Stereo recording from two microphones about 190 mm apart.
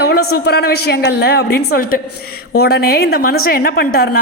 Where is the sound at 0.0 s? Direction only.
60° left (ahead or behind).